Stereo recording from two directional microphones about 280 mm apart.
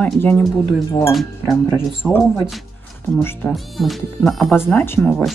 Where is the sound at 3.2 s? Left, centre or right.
Centre.